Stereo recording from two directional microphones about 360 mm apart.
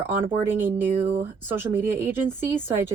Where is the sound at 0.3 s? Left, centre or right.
Centre.